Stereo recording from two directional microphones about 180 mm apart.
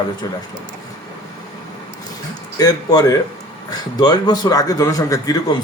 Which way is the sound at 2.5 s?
20° left (ahead or behind).